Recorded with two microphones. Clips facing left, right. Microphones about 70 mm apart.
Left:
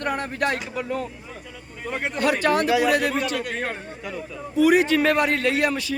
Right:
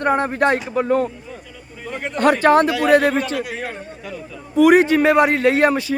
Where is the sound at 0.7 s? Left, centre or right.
Right.